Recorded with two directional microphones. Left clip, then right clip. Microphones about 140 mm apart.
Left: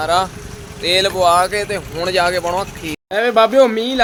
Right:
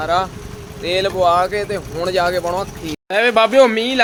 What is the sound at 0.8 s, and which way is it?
Speech, 10° left (ahead or behind).